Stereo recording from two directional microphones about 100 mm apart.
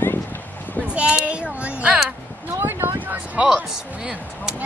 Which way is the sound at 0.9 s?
10° right (ahead or behind).